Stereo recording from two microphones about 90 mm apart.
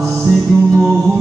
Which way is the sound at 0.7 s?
35° right (ahead or behind).